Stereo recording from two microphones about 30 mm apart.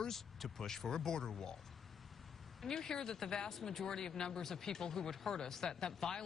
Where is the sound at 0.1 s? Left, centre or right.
Centre.